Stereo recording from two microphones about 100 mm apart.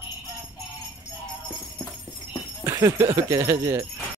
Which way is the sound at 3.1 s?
35° right (ahead or behind).